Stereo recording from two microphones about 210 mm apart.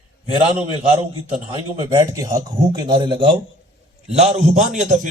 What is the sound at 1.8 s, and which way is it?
A man's voice, 15° right (ahead or behind).